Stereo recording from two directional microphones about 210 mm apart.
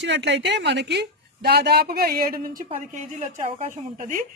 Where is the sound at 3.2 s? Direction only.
35° right (ahead or behind).